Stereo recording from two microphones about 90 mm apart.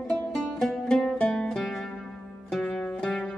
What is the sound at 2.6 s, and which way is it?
Zither, 15° left (ahead or behind).